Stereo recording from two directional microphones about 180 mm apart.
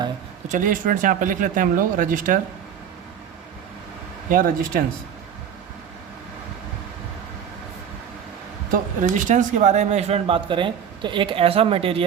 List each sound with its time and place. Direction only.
0.4 s speech: 45° right (ahead or behind)
4.3 s speech: 50° right (ahead or behind)
8.7 s speech: 45° right (ahead or behind)